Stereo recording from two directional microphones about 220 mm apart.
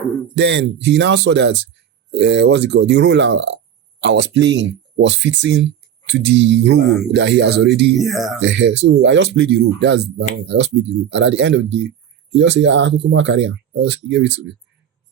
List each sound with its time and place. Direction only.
0.3 s speech: 50° right (ahead or behind)
7.9 s speech: centre (ahead or behind)
8.4 s speech: 55° right (ahead or behind)